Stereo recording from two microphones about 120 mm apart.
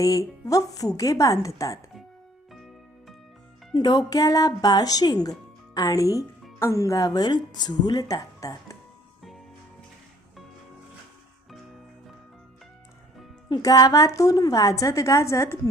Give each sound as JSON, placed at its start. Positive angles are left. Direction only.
{"t": 0.0, "sound": "a woman's voice", "side_deg": 30}
{"t": 2.5, "sound": "music", "side_deg": 0}
{"t": 3.8, "sound": "speech", "side_deg": 35}
{"t": 13.5, "sound": "a woman's voice", "side_deg": 30}